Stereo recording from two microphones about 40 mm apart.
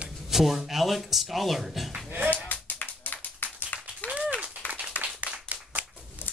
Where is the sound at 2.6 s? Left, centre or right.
Left.